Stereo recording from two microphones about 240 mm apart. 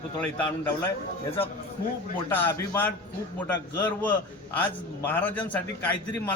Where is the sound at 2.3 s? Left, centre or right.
Centre.